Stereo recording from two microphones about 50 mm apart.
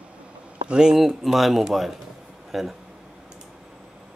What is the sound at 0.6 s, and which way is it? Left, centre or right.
Speech, centre.